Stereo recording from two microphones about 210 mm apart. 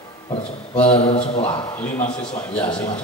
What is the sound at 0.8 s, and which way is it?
Speech, 30° left (ahead or behind).